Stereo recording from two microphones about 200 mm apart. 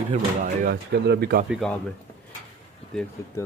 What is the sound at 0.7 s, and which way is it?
Speech, 55° right (ahead or behind).